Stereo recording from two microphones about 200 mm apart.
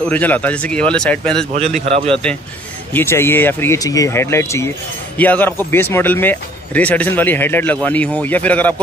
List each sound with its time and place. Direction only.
0.1 s speech: 10° left (ahead or behind)
1.9 s a man's voice: 30° right (ahead or behind)
2.9 s speech: 10° left (ahead or behind)